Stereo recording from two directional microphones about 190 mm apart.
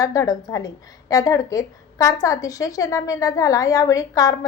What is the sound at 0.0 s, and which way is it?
A woman's voice, 20° left (ahead or behind).